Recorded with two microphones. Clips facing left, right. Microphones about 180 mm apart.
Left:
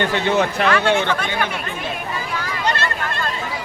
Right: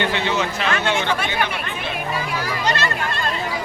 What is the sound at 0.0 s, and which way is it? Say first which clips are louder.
Speech: left 3 dB; 50° left (ahead or behind).